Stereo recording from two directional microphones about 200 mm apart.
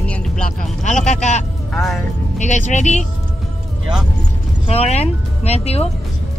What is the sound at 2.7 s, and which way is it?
Speech, 35° left (ahead or behind).